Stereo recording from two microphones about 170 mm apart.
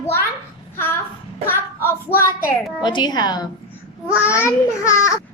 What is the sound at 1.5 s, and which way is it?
Child singing, 15° left (ahead or behind).